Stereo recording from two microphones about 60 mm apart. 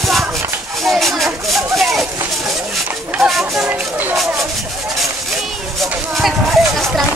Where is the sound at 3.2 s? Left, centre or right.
Centre.